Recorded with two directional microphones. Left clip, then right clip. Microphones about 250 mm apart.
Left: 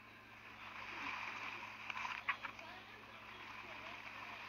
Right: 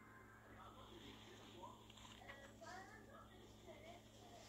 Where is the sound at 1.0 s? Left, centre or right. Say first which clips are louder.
Left 17 dB; centre.